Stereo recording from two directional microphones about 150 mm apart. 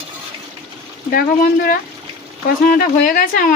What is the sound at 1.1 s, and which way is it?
Speech, 70° left (ahead or behind).